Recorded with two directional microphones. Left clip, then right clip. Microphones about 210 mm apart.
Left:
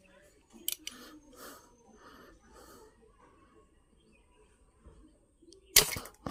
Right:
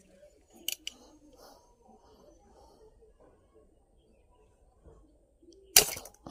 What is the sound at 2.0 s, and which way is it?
Snort, 30° left (ahead or behind).